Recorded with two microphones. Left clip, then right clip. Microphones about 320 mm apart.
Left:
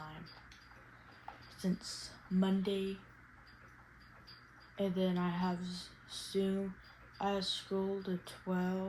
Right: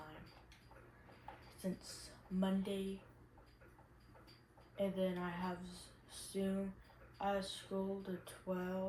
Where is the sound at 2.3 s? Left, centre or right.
Left.